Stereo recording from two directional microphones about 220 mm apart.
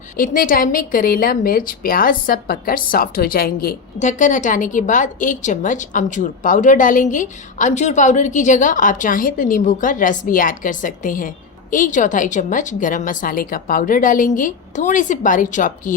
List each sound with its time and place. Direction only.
0.2 s a woman's voice: 40° left (ahead or behind)